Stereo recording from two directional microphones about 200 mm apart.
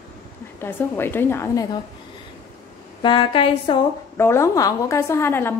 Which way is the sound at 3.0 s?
25° left (ahead or behind).